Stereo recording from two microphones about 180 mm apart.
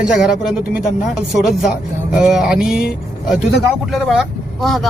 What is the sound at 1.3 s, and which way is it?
Speech, centre (ahead or behind).